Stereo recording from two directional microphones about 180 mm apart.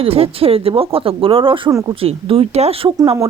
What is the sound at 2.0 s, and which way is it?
Speech, 30° right (ahead or behind).